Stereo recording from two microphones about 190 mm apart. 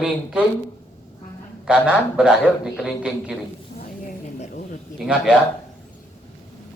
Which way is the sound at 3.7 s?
45° left (ahead or behind).